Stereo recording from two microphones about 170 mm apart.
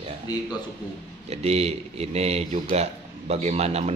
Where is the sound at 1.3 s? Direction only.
40° right (ahead or behind).